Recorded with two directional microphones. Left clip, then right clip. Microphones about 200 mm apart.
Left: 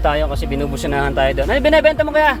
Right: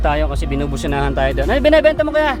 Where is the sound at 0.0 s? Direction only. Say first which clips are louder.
Left 1 dB; 10° right (ahead or behind).